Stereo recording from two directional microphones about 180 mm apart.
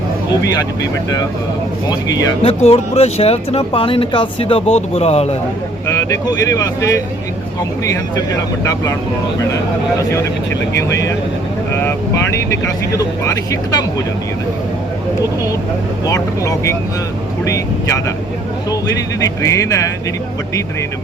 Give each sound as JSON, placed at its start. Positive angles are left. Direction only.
{"t": 1.9, "sound": "speech", "side_deg": 20}
{"t": 2.4, "sound": "speech", "side_deg": 35}
{"t": 5.9, "sound": "speech", "side_deg": 15}
{"t": 8.1, "sound": "speech", "side_deg": 20}
{"t": 10.8, "sound": "speech", "side_deg": 15}
{"t": 16.0, "sound": "speech", "side_deg": 20}
{"t": 19.2, "sound": "speech", "side_deg": 20}